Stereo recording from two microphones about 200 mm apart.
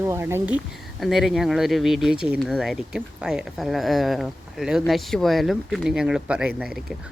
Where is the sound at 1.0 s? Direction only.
Centre (ahead or behind).